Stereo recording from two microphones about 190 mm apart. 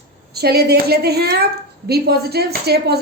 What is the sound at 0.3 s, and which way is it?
A woman's voice, 55° right (ahead or behind).